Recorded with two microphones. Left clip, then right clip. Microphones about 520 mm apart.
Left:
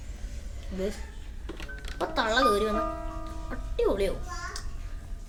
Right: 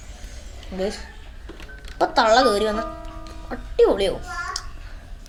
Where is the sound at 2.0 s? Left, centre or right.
Left.